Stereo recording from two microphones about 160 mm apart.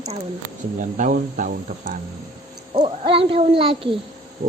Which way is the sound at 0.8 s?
55° right (ahead or behind).